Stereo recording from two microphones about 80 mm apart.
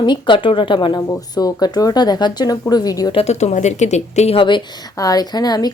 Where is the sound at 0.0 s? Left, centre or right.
Left.